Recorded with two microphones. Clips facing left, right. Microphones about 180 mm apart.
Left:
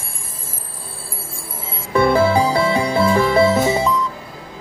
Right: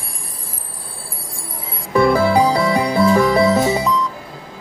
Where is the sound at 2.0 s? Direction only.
20° left (ahead or behind).